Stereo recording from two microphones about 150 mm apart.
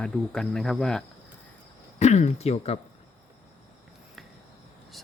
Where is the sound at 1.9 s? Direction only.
50° left (ahead or behind).